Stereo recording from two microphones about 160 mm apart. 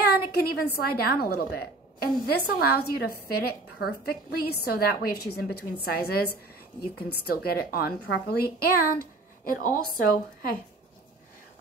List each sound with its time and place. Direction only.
0.1 s a woman's voice: 75° left (ahead or behind)
9.4 s a woman's voice: 60° left (ahead or behind)